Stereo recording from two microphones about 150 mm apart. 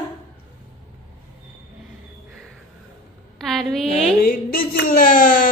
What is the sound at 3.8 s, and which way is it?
Music, 45° left (ahead or behind).